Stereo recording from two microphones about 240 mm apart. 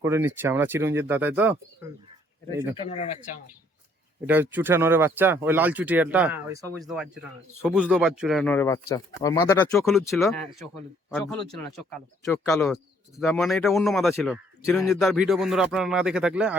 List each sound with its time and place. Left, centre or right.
0.0 s speech: centre
2.8 s speech: left
4.3 s speech: centre
9.7 s speech: centre